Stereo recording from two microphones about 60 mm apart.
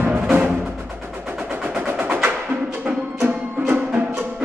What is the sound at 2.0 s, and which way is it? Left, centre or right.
Music, right.